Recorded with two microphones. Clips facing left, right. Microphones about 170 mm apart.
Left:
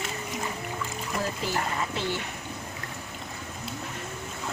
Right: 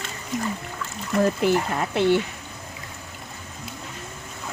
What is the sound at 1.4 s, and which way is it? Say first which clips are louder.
Speech: right 8 dB; 60° right (ahead or behind).